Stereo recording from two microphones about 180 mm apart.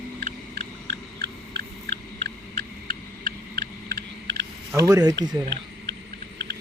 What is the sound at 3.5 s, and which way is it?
Owl, 65° right (ahead or behind).